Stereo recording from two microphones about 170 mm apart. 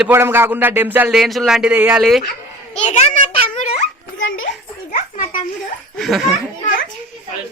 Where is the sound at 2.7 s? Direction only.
40° left (ahead or behind).